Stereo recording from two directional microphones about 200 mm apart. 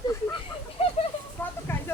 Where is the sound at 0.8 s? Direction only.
30° left (ahead or behind).